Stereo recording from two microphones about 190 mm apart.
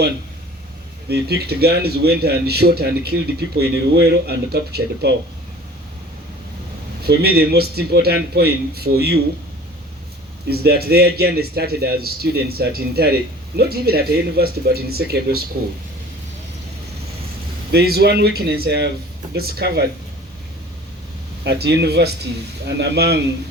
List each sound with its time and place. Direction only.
1.0 s a man's voice: 55° right (ahead or behind)
7.0 s a man's voice: 55° right (ahead or behind)
10.5 s a man's voice: 55° right (ahead or behind)
17.7 s a man's voice: 55° right (ahead or behind)
21.4 s a man's voice: 60° right (ahead or behind)